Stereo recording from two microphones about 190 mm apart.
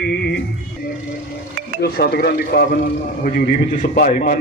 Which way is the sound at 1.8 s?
55° left (ahead or behind).